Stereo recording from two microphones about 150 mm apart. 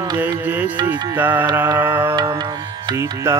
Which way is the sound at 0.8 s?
10° right (ahead or behind).